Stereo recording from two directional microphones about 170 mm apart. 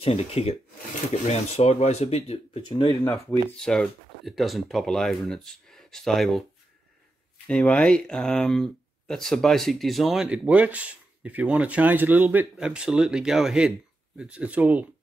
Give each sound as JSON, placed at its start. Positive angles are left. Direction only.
{"t": 0.0, "sound": "speech", "side_deg": 35}
{"t": 2.9, "sound": "speech", "side_deg": 20}
{"t": 3.6, "sound": "speech", "side_deg": 5}
{"t": 7.4, "sound": "speech", "side_deg": 5}